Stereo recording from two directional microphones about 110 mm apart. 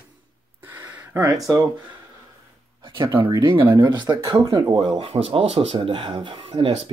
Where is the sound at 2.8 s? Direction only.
45° right (ahead or behind).